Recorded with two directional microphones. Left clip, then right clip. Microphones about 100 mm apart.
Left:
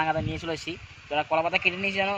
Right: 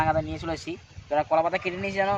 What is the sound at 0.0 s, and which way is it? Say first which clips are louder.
Speech: right 2 dB; 35° right (ahead or behind).